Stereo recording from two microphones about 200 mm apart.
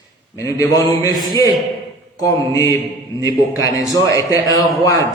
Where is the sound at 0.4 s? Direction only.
15° left (ahead or behind).